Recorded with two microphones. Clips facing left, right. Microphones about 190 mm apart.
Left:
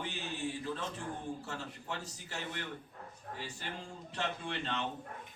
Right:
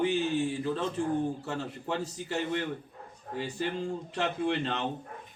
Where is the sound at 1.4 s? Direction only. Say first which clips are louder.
Right 8 dB; 60° right (ahead or behind).